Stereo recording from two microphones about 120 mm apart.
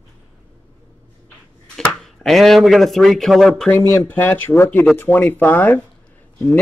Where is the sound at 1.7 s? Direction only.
5° left (ahead or behind).